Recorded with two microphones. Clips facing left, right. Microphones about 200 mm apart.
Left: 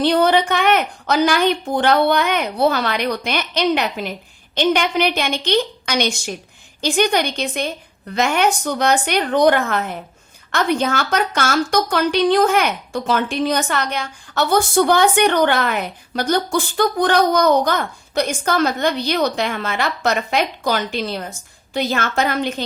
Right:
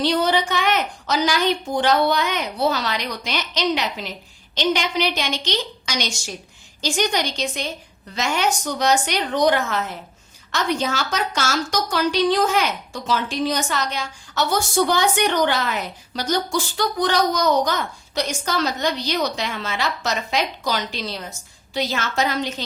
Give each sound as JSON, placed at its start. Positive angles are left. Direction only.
{"t": 0.0, "sound": "a woman's voice", "side_deg": 55}